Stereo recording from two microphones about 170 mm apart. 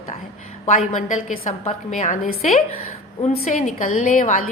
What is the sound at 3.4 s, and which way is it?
A woman's voice, 50° left (ahead or behind).